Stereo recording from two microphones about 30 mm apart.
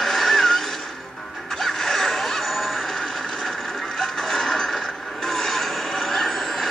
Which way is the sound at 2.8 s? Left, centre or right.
Centre.